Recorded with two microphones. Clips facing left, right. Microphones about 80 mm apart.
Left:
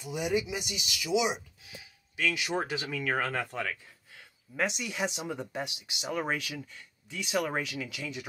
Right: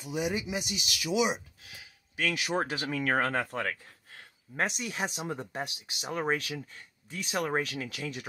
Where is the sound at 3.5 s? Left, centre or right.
Right.